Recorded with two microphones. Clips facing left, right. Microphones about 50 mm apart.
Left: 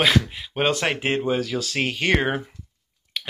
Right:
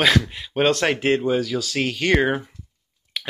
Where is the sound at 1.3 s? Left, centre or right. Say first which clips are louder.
Right 2 dB; left.